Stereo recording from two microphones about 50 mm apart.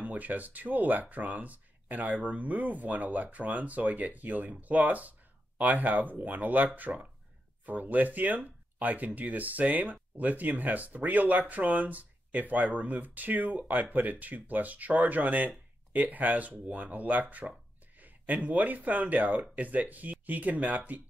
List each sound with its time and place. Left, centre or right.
0.0 s speech: right